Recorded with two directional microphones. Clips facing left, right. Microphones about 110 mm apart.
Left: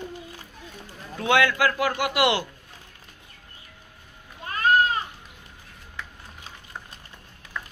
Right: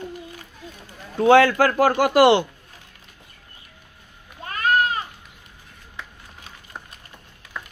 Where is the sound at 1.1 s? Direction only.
35° right (ahead or behind).